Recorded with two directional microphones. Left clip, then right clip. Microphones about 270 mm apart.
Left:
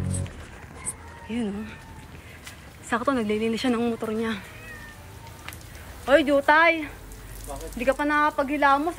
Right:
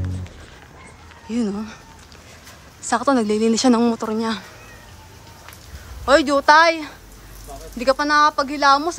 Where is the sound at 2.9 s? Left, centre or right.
Centre.